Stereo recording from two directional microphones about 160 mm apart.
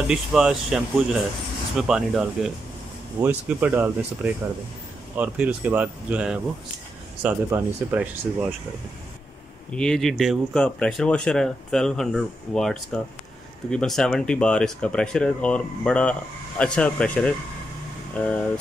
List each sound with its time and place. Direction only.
0.1 s speech: 5° right (ahead or behind)
9.8 s speech: 5° left (ahead or behind)